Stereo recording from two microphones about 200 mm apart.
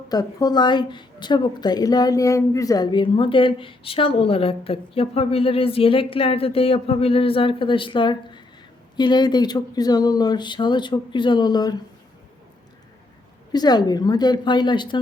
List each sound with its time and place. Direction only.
0.1 s a woman's voice: 20° left (ahead or behind)
13.5 s a woman's voice: 20° left (ahead or behind)